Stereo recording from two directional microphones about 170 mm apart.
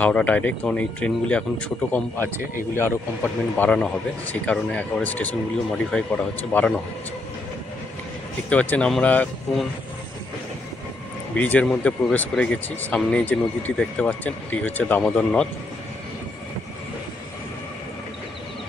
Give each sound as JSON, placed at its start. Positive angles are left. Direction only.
{"t": 0.0, "sound": "speech", "side_deg": 10}
{"t": 3.5, "sound": "speech", "side_deg": 5}
{"t": 8.5, "sound": "speech", "side_deg": 10}
{"t": 11.3, "sound": "speech", "side_deg": 10}